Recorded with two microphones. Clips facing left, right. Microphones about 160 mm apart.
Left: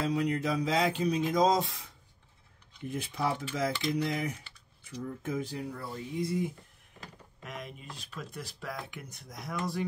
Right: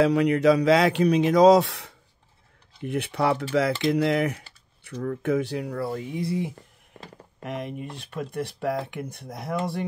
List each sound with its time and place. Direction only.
0.0 s speech: 75° right (ahead or behind)
8.0 s speech: 60° right (ahead or behind)
9.4 s speech: 25° right (ahead or behind)